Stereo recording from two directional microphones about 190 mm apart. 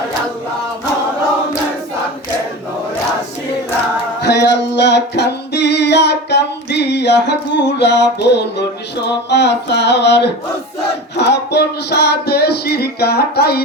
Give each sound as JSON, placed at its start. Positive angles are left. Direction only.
{"t": 4.2, "sound": "music", "side_deg": 65}